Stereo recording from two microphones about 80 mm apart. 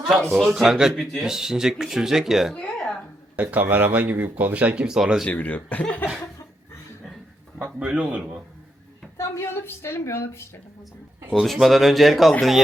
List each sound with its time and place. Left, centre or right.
0.1 s speech: centre
2.6 s a sound: centre
3.3 s speech: right
5.2 s speech: centre
7.9 s speech: centre
9.1 s a woman's voice: left
11.3 s speech: centre